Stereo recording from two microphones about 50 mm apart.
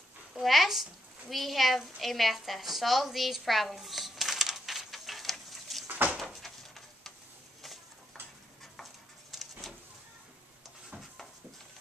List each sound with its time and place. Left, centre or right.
0.3 s a woman's voice: centre
5.9 s door: right
6.4 s a sound: centre
9.3 s vehicle: centre